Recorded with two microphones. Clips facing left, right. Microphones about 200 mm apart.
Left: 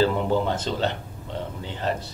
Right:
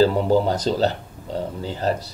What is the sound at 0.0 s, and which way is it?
Speech, 40° right (ahead or behind).